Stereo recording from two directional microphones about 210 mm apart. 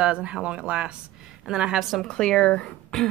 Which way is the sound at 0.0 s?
5° right (ahead or behind).